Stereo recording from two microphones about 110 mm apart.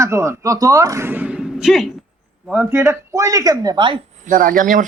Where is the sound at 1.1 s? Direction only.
15° right (ahead or behind).